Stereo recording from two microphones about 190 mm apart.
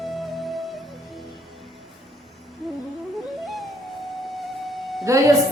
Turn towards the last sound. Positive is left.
turn(degrees=-15)  # may be behind; listen again after turning